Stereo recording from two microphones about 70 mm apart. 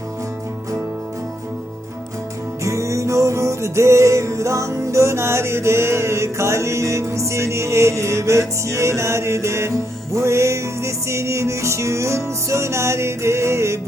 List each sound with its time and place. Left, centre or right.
2.6 s music: right